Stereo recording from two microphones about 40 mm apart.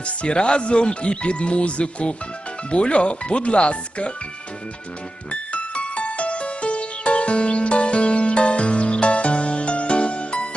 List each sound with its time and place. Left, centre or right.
0.0 s speech: left
5.3 s music: left